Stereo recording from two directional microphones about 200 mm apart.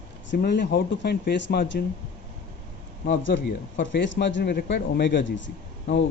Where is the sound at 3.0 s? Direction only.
60° left (ahead or behind).